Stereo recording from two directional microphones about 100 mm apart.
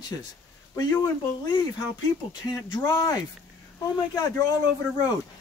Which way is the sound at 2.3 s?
45° left (ahead or behind).